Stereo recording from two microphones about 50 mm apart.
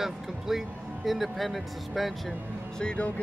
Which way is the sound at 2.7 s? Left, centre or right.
Centre.